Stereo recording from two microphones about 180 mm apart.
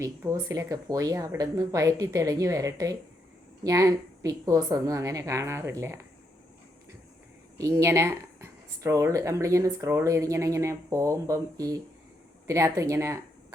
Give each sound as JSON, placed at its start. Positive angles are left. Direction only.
{"t": 0.0, "sound": "speech", "side_deg": -15}
{"t": 7.6, "sound": "speech", "side_deg": -15}